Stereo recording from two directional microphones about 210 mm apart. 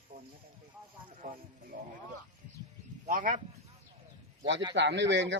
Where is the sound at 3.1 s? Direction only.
40° right (ahead or behind).